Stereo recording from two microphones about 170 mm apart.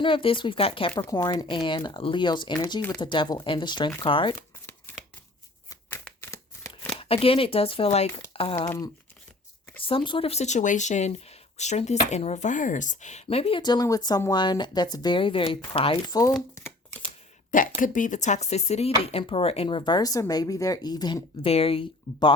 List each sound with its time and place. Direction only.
0.0 s speech: 30° left (ahead or behind)
4.9 s shuffling cards: 10° left (ahead or behind)
7.0 s speech: 35° left (ahead or behind)
9.8 s speech: 30° left (ahead or behind)
16.6 s shuffling cards: 15° left (ahead or behind)
17.5 s speech: 50° left (ahead or behind); by 22.4 s 30° left (ahead or behind)